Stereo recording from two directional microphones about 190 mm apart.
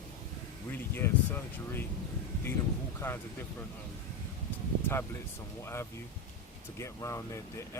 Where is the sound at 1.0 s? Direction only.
10° left (ahead or behind).